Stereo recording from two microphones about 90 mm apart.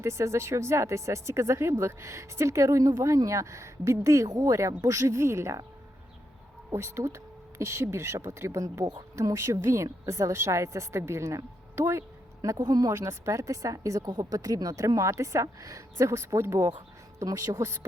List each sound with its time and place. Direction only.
0.0 s speech: 35° right (ahead or behind)
6.7 s speech: 30° right (ahead or behind)
12.5 s speech: 45° right (ahead or behind)
12.9 s speech: 30° right (ahead or behind)